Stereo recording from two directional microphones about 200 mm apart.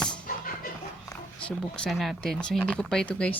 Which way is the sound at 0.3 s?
45° left (ahead or behind).